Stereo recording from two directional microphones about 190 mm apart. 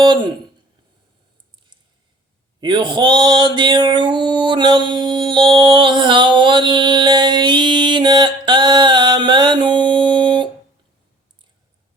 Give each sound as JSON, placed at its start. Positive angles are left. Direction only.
{"t": 0.0, "sound": "speech", "side_deg": -25}
{"t": 2.6, "sound": "mantra", "side_deg": -25}